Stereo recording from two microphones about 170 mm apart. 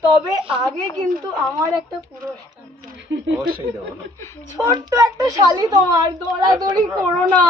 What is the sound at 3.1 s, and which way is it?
Speech, 90° right.